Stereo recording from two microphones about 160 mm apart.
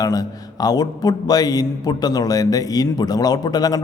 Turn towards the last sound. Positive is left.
turn(degrees=25)  # may be behind; listen again after turning